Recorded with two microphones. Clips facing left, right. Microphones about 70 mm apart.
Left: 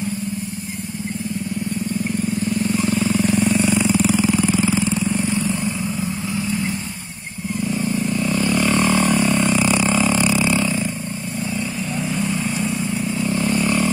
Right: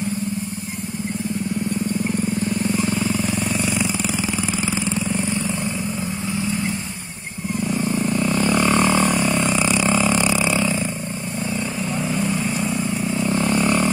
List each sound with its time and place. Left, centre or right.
3.1 s vehicle: centre
3.9 s vehicle: centre
4.2 s vehicle: centre
4.6 s vehicle: centre
7.6 s vehicle: right
9.8 s burping: right
13.3 s vehicle: right